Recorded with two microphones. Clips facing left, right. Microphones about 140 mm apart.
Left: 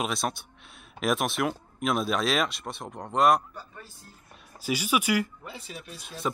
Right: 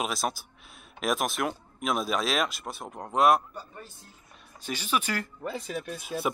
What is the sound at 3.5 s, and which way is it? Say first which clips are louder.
Speech: right 2 dB; 15° right (ahead or behind).